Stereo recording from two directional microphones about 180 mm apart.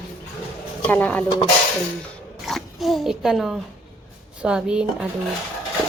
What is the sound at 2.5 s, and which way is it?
A woman's voice, centre (ahead or behind).